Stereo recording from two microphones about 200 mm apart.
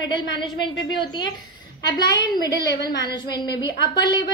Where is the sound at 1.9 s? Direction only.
20° left (ahead or behind).